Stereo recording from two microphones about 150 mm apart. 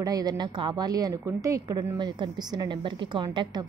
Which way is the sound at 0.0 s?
25° right (ahead or behind).